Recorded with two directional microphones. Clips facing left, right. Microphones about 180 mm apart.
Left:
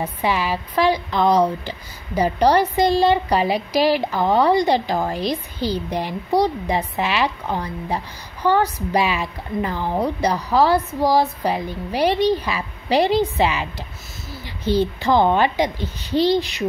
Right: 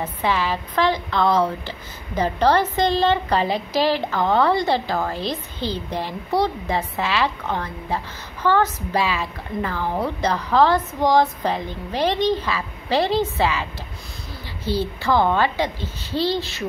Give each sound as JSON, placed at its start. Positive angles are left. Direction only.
{"t": 0.0, "sound": "a woman's voice", "side_deg": 10}